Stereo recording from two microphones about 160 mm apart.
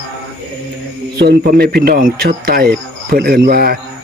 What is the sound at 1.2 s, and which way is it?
Speech, 80° right.